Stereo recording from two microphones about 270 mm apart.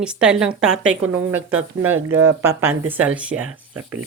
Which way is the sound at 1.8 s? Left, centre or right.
Centre.